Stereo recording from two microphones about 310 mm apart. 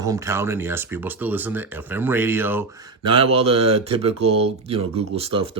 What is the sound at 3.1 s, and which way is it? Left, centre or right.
Speech, centre.